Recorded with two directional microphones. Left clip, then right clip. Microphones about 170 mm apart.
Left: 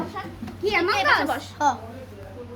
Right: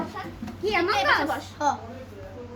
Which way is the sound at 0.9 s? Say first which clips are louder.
Left 2 dB; 80° left.